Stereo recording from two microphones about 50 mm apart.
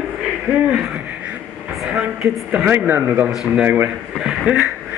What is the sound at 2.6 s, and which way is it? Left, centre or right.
Speech, right.